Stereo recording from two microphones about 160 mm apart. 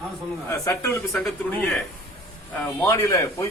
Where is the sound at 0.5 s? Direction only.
20° left (ahead or behind).